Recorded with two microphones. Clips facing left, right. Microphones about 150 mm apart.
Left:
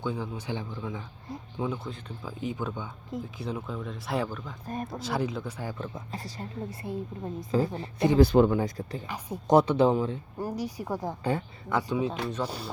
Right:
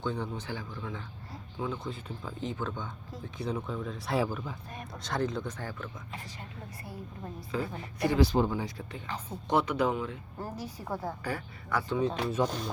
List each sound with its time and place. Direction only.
0.0 s speech: 5° left (ahead or behind)
0.4 s speech: 20° left (ahead or behind)
1.8 s speech: centre (ahead or behind)
4.6 s speech: 45° left (ahead or behind)
4.9 s speech: 5° left (ahead or behind)
5.8 s a woman's voice: 35° left (ahead or behind)
8.2 s speech: 60° left (ahead or behind); by 9.0 s 40° left (ahead or behind)
9.0 s speech: 10° left (ahead or behind)
9.5 s a woman's voice: 40° left (ahead or behind)
10.3 s speech: 15° left (ahead or behind)
11.2 s speech: 25° left (ahead or behind); by 12.7 s 10° left (ahead or behind)